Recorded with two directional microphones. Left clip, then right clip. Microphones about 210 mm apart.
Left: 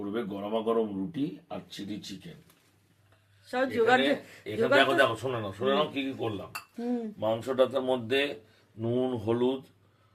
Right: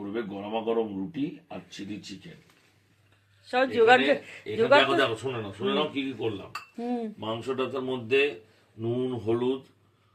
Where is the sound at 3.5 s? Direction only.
Centre (ahead or behind).